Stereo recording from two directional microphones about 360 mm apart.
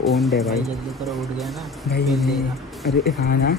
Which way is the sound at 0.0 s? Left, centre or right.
Centre.